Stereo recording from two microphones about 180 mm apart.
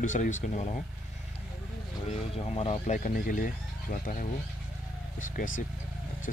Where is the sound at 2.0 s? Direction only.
35° left (ahead or behind).